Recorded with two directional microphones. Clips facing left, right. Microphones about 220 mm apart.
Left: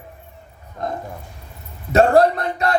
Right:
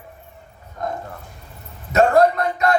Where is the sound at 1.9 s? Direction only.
35° left (ahead or behind).